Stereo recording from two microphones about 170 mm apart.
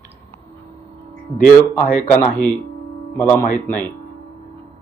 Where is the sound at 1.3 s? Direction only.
10° left (ahead or behind).